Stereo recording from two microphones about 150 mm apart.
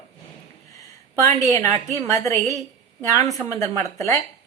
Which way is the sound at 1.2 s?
20° left (ahead or behind).